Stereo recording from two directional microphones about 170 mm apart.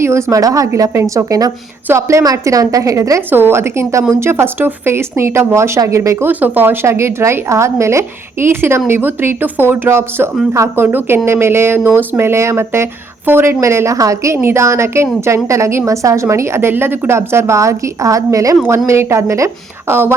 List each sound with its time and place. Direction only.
0.0 s a woman's voice: 15° right (ahead or behind)